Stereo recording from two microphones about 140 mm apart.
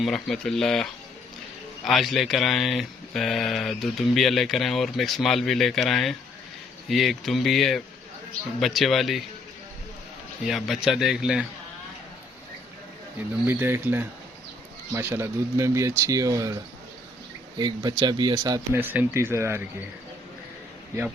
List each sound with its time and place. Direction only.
0.0 s speech: centre (ahead or behind)
10.4 s speech: centre (ahead or behind)
13.1 s speech: 15° right (ahead or behind)
17.6 s speech: 30° right (ahead or behind)
18.7 s speech: 15° right (ahead or behind)